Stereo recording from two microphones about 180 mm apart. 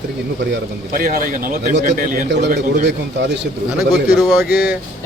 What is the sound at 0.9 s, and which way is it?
Speech, 50° right (ahead or behind).